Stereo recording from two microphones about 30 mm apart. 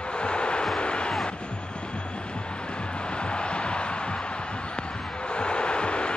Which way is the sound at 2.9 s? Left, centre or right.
Left.